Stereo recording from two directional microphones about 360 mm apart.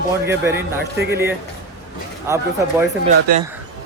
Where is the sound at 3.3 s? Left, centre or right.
Right.